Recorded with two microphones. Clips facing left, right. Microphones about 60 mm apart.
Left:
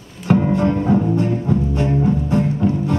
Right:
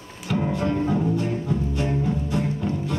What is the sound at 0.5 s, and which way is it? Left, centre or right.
Music, left.